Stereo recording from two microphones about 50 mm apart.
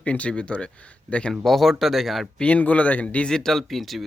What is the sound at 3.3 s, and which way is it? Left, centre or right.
Speech, centre.